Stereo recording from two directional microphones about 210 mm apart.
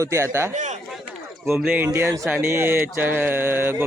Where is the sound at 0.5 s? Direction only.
35° right (ahead or behind).